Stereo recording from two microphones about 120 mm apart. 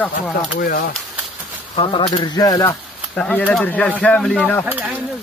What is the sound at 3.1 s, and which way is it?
Speech, 10° left (ahead or behind).